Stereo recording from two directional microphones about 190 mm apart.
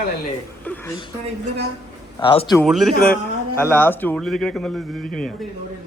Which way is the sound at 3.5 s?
10° left (ahead or behind).